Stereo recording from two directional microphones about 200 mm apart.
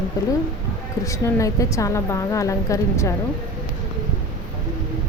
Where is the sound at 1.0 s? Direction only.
15° left (ahead or behind).